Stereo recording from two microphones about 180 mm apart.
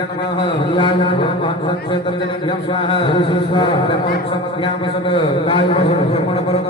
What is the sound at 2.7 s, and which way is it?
A man's voice, 30° left (ahead or behind).